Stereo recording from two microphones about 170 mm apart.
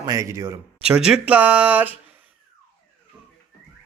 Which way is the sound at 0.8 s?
5° right (ahead or behind).